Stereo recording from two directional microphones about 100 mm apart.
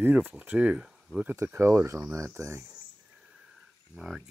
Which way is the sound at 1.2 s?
25° right (ahead or behind).